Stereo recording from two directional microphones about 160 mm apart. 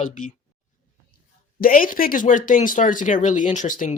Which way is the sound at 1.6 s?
60° left (ahead or behind).